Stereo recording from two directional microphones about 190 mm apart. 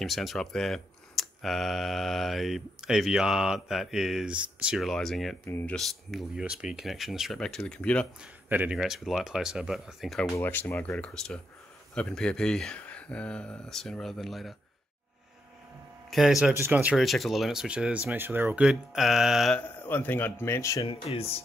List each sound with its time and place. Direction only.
0.0 s speech: centre (ahead or behind)
5.4 s speech: 10° left (ahead or behind)
5.8 s speech: centre (ahead or behind)
8.2 s speech: 5° right (ahead or behind)
10.3 s speech: 10° left (ahead or behind)
16.1 s speech: centre (ahead or behind)
20.8 s speech: 30° left (ahead or behind)